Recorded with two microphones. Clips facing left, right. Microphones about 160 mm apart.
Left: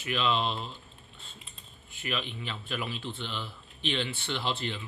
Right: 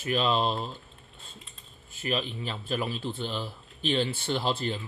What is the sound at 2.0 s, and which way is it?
Speech, 40° right (ahead or behind).